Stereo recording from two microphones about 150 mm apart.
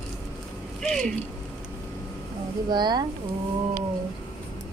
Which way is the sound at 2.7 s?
30° right (ahead or behind).